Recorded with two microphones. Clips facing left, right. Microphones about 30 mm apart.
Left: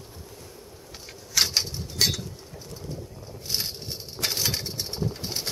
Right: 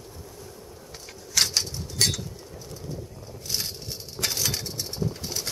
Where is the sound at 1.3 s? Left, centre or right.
Centre.